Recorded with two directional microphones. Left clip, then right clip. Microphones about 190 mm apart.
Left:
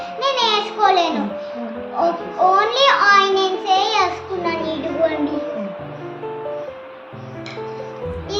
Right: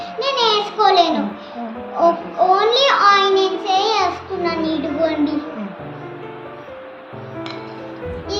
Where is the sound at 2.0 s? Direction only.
10° left (ahead or behind).